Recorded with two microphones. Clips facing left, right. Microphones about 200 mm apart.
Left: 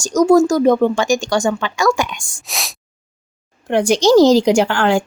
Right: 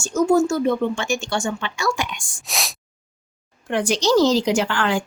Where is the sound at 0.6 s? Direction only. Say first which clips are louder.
Left 7 dB; 40° left (ahead or behind).